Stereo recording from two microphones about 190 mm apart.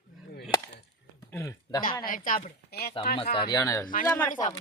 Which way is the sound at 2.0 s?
45° left (ahead or behind).